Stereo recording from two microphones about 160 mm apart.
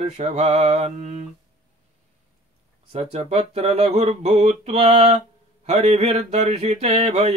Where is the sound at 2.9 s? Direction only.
40° right (ahead or behind).